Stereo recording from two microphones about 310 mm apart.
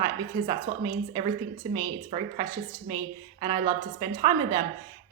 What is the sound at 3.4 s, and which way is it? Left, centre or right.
A woman's voice, centre.